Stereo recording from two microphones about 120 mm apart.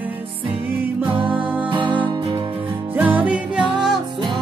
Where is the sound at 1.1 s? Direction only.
45° right (ahead or behind).